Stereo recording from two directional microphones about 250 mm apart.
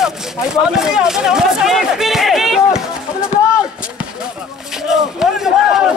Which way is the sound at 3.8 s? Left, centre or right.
Centre.